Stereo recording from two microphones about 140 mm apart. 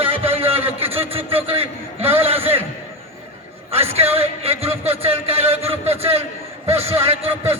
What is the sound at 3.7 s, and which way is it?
A man's voice, 45° right (ahead or behind).